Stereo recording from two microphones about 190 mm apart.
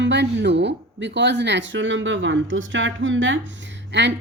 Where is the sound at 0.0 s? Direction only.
65° right (ahead or behind).